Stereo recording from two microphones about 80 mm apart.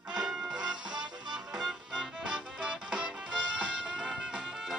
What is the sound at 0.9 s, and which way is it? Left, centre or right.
Music, right.